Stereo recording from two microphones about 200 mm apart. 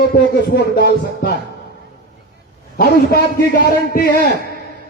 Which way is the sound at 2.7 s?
50° left (ahead or behind).